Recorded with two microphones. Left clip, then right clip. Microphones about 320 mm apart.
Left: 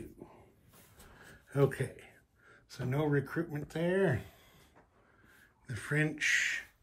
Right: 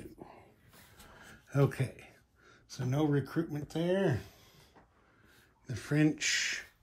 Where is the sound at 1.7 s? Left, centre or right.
Centre.